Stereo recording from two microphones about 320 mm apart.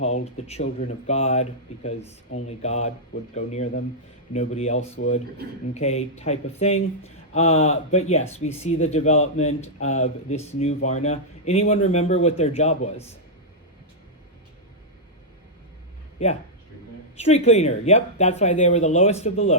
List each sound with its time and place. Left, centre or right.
0.0 s speech: left
17.2 s speech: centre